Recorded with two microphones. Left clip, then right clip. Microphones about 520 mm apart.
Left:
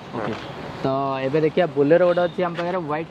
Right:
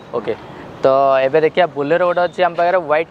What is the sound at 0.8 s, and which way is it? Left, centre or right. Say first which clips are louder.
Speech: right 11 dB; right.